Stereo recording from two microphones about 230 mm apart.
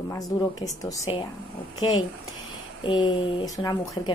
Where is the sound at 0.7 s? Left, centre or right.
Centre.